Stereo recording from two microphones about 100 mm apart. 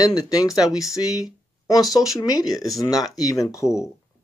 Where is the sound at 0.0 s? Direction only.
40° left (ahead or behind).